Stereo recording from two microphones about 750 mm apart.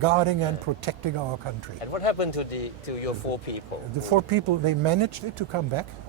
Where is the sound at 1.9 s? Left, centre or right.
Left.